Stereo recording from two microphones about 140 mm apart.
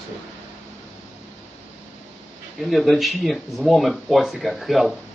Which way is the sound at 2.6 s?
Centre (ahead or behind).